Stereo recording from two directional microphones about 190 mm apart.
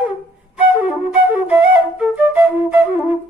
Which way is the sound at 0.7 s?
10° right (ahead or behind).